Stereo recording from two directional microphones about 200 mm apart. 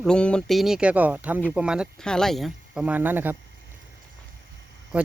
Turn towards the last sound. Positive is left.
turn(degrees=-5)  # may be behind; listen again after turning